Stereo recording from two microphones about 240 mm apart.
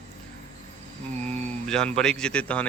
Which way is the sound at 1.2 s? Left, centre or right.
Centre.